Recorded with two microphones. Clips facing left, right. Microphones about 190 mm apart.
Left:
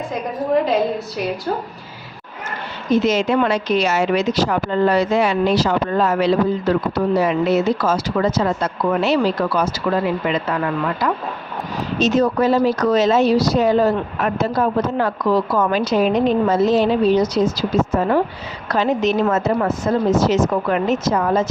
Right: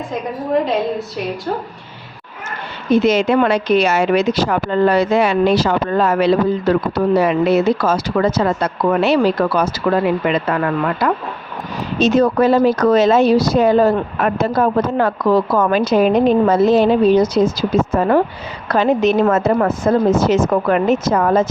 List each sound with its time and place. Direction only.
0.6 s a woman's voice: centre (ahead or behind)
2.9 s speech: 65° right (ahead or behind)